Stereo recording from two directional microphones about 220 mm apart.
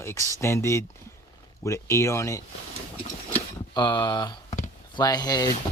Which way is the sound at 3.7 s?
20° left (ahead or behind).